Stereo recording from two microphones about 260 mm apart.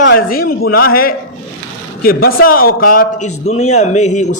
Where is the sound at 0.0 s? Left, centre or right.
Left.